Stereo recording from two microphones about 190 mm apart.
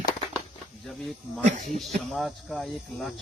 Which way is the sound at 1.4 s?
35° right (ahead or behind).